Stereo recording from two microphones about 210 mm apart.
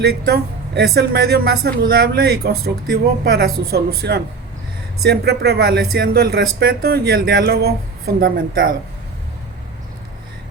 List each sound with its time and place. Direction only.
0.0 s a woman's voice: 50° right (ahead or behind)